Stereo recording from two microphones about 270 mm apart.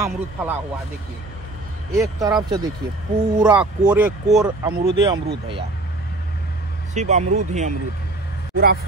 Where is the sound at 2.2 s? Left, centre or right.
Centre.